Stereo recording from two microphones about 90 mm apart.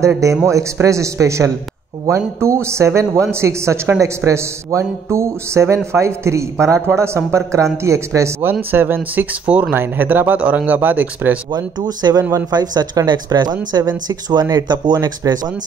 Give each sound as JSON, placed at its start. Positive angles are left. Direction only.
{"t": 0.5, "sound": "speech", "side_deg": -35}
{"t": 8.4, "sound": "speech", "side_deg": -25}
{"t": 11.5, "sound": "speech", "side_deg": -50}
{"t": 12.4, "sound": "speech", "side_deg": -50}